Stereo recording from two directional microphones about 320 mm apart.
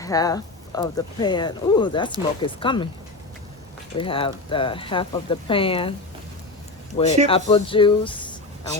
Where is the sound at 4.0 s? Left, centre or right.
Centre.